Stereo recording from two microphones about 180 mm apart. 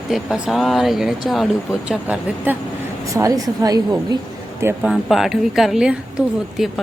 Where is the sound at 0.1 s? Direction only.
Centre (ahead or behind); by 4.2 s 20° right (ahead or behind).